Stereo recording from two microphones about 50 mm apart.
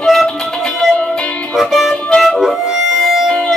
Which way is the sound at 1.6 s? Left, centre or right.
Centre.